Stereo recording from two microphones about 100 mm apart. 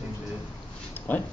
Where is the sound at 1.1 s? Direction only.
20° left (ahead or behind).